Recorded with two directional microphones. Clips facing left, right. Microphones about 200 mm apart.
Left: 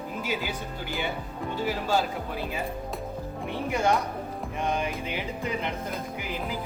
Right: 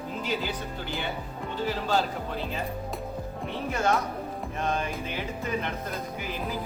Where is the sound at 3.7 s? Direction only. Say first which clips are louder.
Left 1 dB; 15° left (ahead or behind).